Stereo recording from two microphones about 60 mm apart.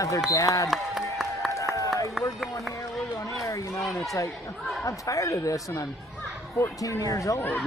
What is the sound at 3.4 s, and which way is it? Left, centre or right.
Speech, left.